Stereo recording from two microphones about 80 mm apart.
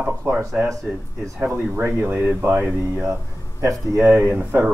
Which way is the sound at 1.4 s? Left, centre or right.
Right.